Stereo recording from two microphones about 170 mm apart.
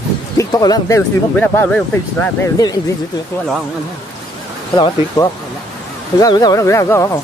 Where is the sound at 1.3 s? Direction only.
10° left (ahead or behind).